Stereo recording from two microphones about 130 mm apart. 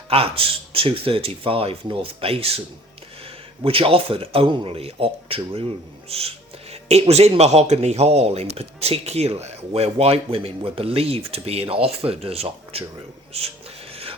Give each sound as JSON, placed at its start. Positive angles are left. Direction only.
{"t": 0.1, "sound": "speech", "side_deg": -45}
{"t": 3.6, "sound": "speech", "side_deg": -45}
{"t": 13.9, "sound": "filing", "side_deg": -45}